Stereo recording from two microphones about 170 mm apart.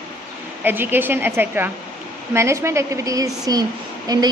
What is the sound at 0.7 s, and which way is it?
A woman's voice, 10° right (ahead or behind).